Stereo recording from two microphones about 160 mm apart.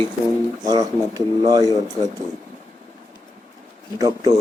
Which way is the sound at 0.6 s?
25° right (ahead or behind).